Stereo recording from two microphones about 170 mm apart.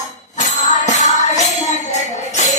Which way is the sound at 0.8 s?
45° left (ahead or behind).